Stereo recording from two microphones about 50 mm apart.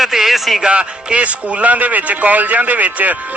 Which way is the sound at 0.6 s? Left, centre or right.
Right.